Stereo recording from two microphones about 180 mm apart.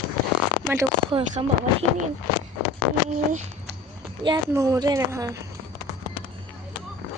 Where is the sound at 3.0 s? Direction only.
45° right (ahead or behind).